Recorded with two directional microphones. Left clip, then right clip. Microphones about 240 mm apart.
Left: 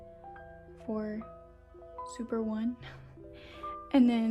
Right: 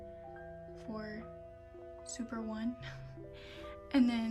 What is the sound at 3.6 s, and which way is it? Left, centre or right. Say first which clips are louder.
Music: left 5 dB; centre.